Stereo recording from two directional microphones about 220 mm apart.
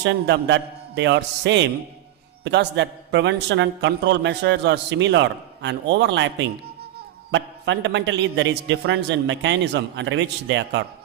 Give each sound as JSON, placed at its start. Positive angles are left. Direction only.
{"t": 0.0, "sound": "a man's voice", "side_deg": -55}
{"t": 7.3, "sound": "a man's voice", "side_deg": -55}